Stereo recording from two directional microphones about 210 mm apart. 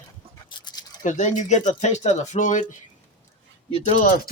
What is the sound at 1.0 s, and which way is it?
Speech, 35° left (ahead or behind).